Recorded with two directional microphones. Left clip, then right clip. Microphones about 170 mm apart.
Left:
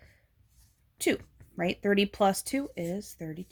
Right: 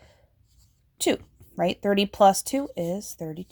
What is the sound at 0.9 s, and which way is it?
Speech, 30° right (ahead or behind).